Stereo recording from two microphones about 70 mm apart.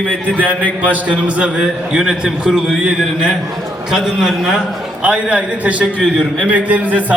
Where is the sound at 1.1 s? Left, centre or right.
Centre.